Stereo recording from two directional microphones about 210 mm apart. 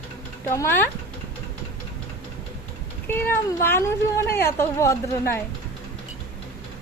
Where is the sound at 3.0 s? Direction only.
10° left (ahead or behind).